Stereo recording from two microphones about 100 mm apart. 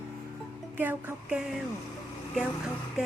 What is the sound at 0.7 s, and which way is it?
Speech, 20° right (ahead or behind).